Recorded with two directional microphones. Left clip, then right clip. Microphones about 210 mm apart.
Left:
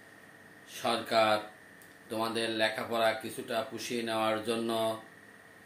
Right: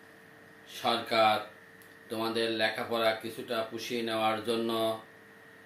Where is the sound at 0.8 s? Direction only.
15° left (ahead or behind).